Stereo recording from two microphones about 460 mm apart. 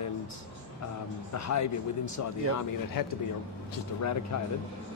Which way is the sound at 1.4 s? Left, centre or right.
Left.